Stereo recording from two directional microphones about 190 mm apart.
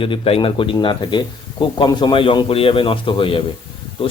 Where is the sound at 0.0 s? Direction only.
30° left (ahead or behind).